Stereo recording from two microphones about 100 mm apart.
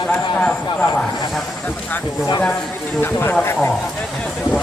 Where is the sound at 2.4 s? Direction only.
5° left (ahead or behind).